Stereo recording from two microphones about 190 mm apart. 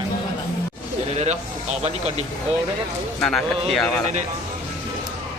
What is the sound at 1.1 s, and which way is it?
Speech, 35° right (ahead or behind).